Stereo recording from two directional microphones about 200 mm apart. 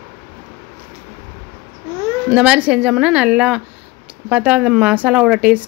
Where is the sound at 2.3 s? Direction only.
5° right (ahead or behind).